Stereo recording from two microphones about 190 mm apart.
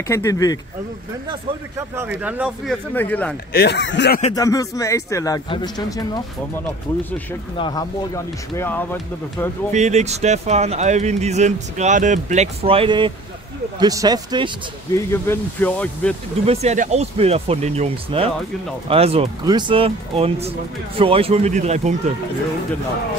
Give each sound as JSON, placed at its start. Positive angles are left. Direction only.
{"t": 0.1, "sound": "a man's voice", "side_deg": 15}
{"t": 1.3, "sound": "speech", "side_deg": -15}
{"t": 3.5, "sound": "speech", "side_deg": 65}
{"t": 4.3, "sound": "a man's voice", "side_deg": 20}
{"t": 9.7, "sound": "speech", "side_deg": -40}
{"t": 15.0, "sound": "a man's voice", "side_deg": 10}
{"t": 16.4, "sound": "speech", "side_deg": -35}